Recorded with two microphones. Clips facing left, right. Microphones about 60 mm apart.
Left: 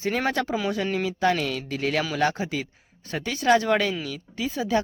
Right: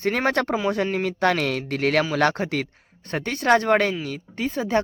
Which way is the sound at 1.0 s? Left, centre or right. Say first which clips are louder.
Right 1 dB; right.